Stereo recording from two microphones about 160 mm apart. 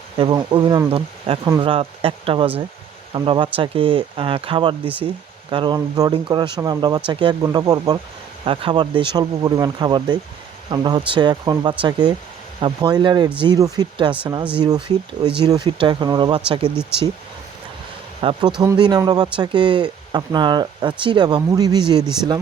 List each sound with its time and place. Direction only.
0.2 s speech: 30° right (ahead or behind)
18.2 s speech: 30° right (ahead or behind)